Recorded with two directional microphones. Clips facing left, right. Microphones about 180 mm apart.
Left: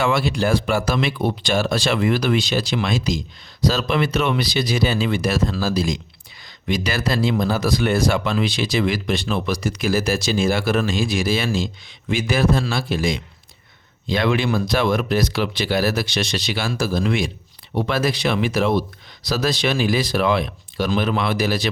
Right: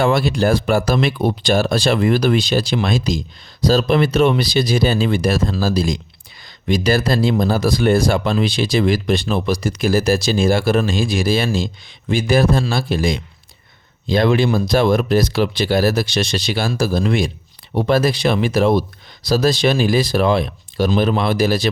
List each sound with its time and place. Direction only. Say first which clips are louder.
0.0 s speech: right 4 dB; 35° right (ahead or behind)